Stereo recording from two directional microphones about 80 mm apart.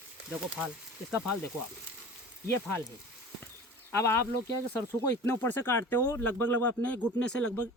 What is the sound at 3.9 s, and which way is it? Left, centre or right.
Speech, left.